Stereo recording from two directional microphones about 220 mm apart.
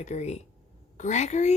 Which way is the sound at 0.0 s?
30° left (ahead or behind).